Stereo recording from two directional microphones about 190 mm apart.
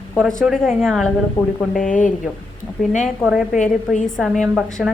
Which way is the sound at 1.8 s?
40° left (ahead or behind).